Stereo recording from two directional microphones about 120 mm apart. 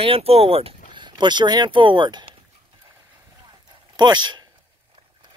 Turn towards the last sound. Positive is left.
turn(degrees=-40)  # may be behind; listen again after turning